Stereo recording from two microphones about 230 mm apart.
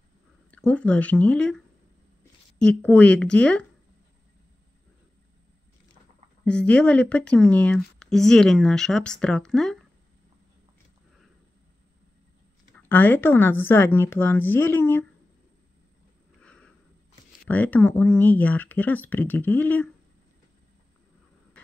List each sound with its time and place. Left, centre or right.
0.5 s speech: centre
2.6 s speech: centre
6.4 s speech: centre
12.8 s speech: centre
16.3 s a sound: centre
17.5 s speech: centre